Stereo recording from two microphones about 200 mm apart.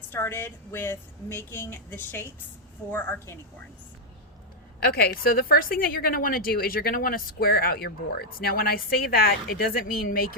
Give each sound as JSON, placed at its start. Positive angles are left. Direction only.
{"t": 0.1, "sound": "a woman's voice", "side_deg": 10}
{"t": 4.8, "sound": "a woman's voice", "side_deg": 50}